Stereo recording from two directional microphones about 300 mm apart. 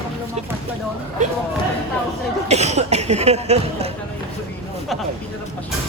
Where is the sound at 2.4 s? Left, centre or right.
Right.